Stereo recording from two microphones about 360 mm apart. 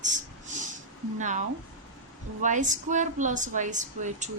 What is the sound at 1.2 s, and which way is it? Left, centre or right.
Speech, right.